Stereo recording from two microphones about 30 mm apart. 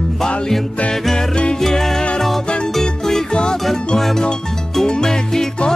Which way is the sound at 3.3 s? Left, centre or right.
Left.